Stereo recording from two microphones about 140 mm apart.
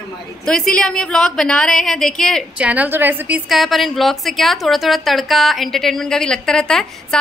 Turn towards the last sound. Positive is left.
turn(degrees=5)  # may be behind; listen again after turning